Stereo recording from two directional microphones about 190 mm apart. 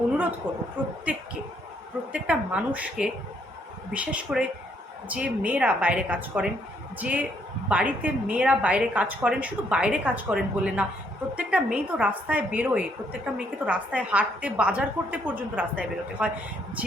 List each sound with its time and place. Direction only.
0.4 s a woman's voice: 10° right (ahead or behind)
2.1 s a woman's voice: 5° right (ahead or behind)